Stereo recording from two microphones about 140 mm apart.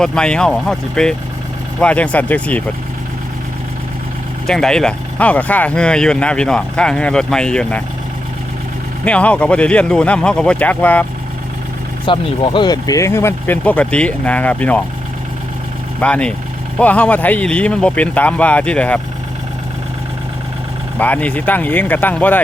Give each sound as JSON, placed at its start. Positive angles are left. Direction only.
{"t": 0.0, "sound": "speech", "side_deg": 5}
{"t": 4.4, "sound": "speech", "side_deg": 5}
{"t": 9.0, "sound": "speech", "side_deg": 10}
{"t": 12.0, "sound": "speech", "side_deg": 35}
{"t": 16.0, "sound": "speech", "side_deg": 10}
{"t": 21.0, "sound": "speech", "side_deg": 10}